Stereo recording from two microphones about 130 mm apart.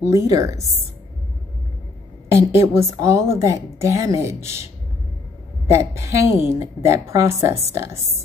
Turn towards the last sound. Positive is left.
turn(degrees=-20)  # may be behind; listen again after turning